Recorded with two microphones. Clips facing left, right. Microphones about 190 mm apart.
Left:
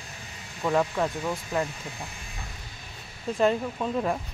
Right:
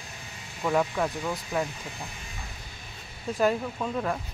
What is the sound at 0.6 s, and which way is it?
Speech, 5° left (ahead or behind).